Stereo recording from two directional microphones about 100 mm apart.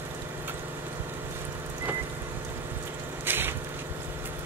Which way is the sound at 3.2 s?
20° right (ahead or behind).